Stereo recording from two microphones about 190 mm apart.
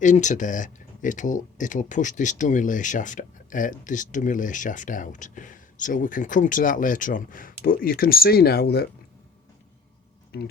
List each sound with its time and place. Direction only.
0.0 s speech: 40° left (ahead or behind); by 8.9 s 55° left (ahead or behind)
10.3 s speech: 55° left (ahead or behind)